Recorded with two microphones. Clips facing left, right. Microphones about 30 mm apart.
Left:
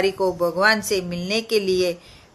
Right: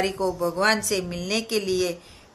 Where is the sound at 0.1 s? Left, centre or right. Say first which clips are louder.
Left 4 dB; centre.